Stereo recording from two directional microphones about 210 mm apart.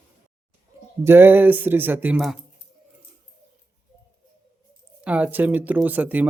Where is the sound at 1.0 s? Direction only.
10° right (ahead or behind).